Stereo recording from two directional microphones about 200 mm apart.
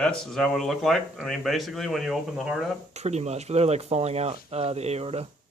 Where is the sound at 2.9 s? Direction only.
35° right (ahead or behind).